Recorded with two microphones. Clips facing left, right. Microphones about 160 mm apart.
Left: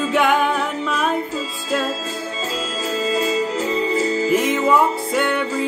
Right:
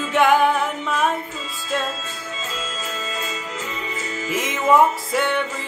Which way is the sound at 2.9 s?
35° left (ahead or behind).